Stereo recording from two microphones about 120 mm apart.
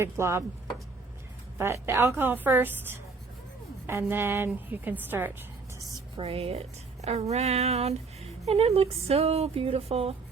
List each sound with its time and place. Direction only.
0.0 s a woman's voice: 20° right (ahead or behind)
1.5 s a woman's voice: 20° right (ahead or behind)
6.1 s a woman's voice: 50° right (ahead or behind)